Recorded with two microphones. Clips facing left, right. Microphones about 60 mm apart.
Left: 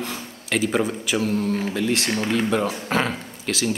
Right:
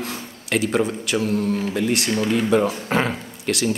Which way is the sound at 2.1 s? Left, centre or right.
Centre.